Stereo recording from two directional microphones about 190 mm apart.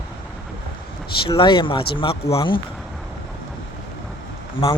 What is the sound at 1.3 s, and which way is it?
Speech, 25° left (ahead or behind).